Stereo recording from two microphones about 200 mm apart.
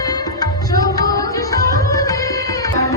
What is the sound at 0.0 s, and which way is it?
Tabla, 20° left (ahead or behind).